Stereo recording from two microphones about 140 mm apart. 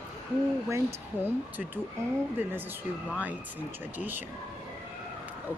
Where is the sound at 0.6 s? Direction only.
20° right (ahead or behind).